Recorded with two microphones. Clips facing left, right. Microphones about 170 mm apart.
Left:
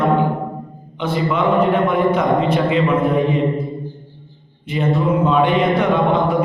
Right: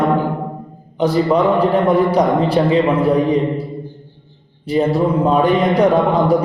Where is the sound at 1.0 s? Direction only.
40° right (ahead or behind).